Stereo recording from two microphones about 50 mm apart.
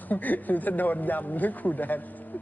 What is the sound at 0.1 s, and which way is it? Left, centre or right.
A woman's voice, left.